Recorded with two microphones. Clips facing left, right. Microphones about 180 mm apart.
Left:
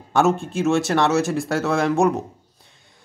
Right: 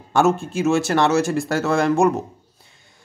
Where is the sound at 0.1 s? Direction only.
Centre (ahead or behind).